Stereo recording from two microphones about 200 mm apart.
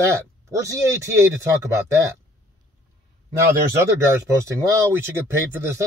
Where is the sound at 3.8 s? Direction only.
15° right (ahead or behind).